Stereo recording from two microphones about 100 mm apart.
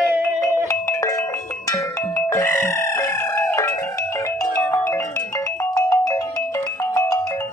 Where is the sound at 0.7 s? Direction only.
30° left (ahead or behind).